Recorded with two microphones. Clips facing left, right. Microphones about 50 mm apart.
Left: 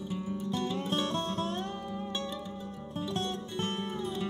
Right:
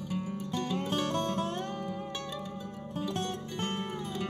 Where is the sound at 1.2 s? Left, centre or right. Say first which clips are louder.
Right 1 dB; right.